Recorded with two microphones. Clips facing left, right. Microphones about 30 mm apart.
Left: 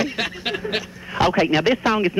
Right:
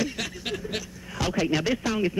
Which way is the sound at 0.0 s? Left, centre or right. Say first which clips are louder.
Left 6 dB; left.